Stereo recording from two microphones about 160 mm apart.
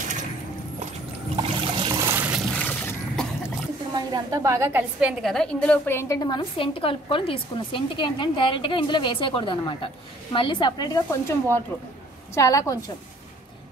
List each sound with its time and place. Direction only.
1.3 s trickle: 30° right (ahead or behind)
2.0 s water: 10° right (ahead or behind)
2.5 s a sound: 10° left (ahead or behind)
3.9 s a woman's voice: 25° right (ahead or behind)
5.2 s a woman's voice: 5° left (ahead or behind); by 11.1 s 25° left (ahead or behind)
12.4 s speech: 20° left (ahead or behind)